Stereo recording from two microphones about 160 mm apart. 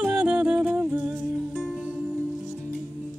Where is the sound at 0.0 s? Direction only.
10° right (ahead or behind).